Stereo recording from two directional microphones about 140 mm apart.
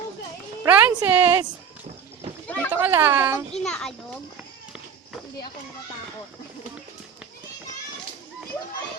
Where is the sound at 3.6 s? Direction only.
5° left (ahead or behind).